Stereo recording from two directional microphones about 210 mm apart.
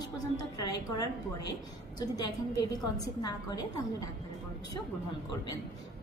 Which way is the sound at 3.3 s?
15° left (ahead or behind).